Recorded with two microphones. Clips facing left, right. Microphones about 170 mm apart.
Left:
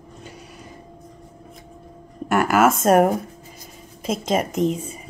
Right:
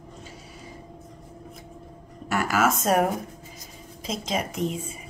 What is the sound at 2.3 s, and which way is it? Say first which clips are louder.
Speech: left 6 dB; 55° left (ahead or behind).